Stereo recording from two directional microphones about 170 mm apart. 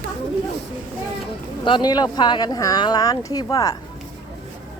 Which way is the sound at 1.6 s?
25° left (ahead or behind).